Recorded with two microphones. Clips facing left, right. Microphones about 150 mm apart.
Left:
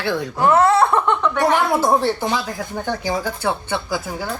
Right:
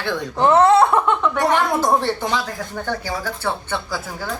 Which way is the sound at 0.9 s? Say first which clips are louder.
Even; centre (ahead or behind).